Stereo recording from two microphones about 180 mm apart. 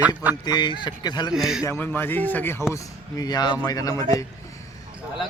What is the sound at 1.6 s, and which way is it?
A man's voice, 10° left (ahead or behind).